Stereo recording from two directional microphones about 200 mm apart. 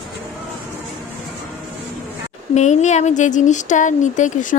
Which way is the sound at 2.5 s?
35° left (ahead or behind).